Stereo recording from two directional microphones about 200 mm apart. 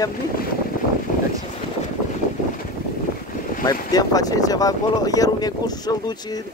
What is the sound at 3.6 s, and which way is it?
Speech, 20° left (ahead or behind).